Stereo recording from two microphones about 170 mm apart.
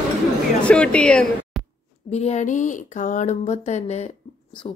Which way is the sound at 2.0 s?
40° left (ahead or behind).